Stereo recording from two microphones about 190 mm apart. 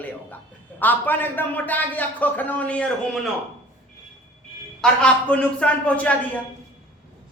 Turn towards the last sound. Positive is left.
turn(degrees=10)  # may be behind; listen again after turning